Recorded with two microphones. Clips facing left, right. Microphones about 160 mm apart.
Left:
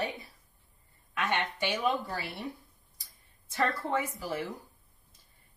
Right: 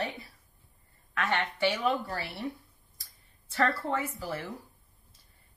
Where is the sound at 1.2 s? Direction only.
15° left (ahead or behind).